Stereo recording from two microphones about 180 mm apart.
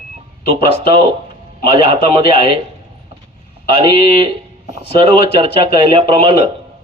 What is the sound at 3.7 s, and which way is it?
Speech, 30° right (ahead or behind).